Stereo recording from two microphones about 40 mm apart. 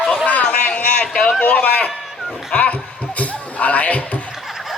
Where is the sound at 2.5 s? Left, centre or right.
Left.